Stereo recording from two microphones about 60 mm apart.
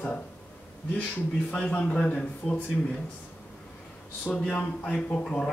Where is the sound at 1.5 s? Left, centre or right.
Left.